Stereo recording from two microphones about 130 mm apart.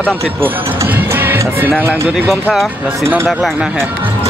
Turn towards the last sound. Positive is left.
turn(degrees=0)  # may be behind; listen again after turning